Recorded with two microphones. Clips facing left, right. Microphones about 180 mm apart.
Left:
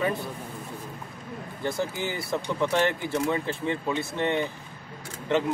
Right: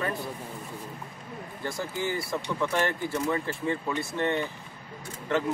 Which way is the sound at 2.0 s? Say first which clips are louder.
Left 1 dB; 20° left (ahead or behind).